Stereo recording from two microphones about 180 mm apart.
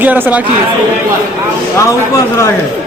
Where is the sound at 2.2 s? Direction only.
15° left (ahead or behind).